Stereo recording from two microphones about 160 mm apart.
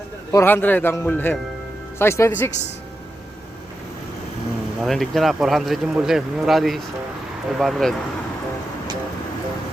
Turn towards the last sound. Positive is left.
turn(degrees=0)  # may be behind; listen again after turning